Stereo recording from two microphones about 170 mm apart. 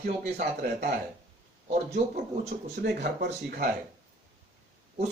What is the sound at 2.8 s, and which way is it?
Speech, 80° right.